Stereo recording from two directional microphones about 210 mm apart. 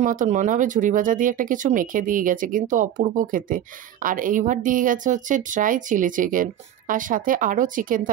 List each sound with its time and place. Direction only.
0.0 s speech: 35° right (ahead or behind)